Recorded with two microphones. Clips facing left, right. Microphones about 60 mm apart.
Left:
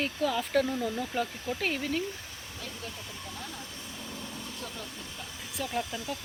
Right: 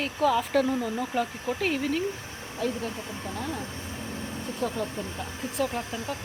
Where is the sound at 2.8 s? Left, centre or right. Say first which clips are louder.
Right 8 dB; right.